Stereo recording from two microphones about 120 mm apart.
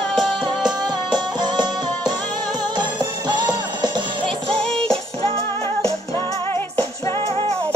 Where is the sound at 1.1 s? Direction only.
35° right (ahead or behind).